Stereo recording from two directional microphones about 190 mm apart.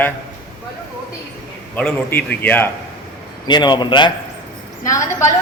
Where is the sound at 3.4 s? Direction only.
25° left (ahead or behind).